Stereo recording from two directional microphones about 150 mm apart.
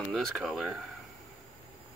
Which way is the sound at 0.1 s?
Centre (ahead or behind).